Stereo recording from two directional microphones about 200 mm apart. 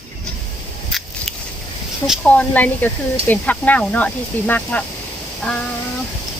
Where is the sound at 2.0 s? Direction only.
Centre (ahead or behind).